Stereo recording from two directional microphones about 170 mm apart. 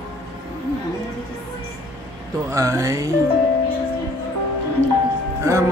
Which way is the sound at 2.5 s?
20° right (ahead or behind).